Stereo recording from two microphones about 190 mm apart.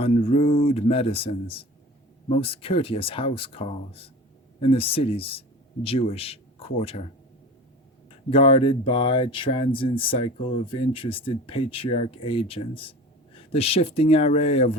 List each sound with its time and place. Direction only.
0.0 s speech: 30° left (ahead or behind)
8.3 s speech: 30° left (ahead or behind)